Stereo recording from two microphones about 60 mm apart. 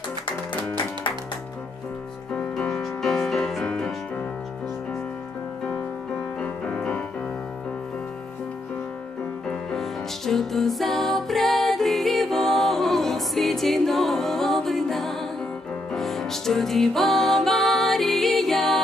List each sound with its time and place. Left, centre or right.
2.8 s music: centre
6.6 s music: centre
9.5 s music: centre